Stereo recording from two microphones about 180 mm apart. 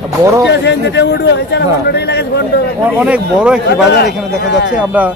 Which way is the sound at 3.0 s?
5° right (ahead or behind).